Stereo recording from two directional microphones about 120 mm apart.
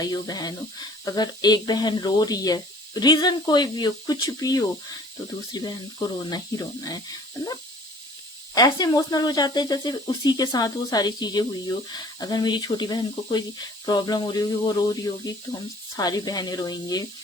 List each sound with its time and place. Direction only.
0.0 s speech: 35° left (ahead or behind)
8.5 s speech: 35° left (ahead or behind)